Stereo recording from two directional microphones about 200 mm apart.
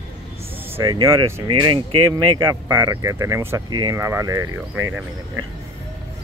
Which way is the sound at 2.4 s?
10° right (ahead or behind).